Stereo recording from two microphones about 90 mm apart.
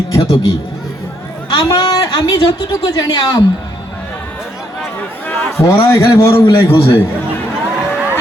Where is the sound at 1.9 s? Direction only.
40° left (ahead or behind).